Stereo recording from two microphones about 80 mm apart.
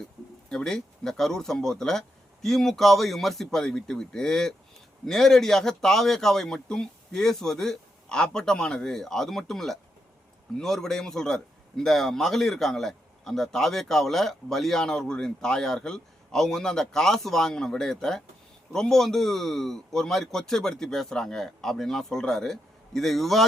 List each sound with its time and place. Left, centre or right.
0.5 s a man's voice: centre